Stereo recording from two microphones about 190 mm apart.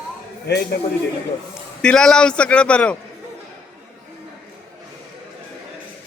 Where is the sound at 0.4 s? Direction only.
60° left (ahead or behind).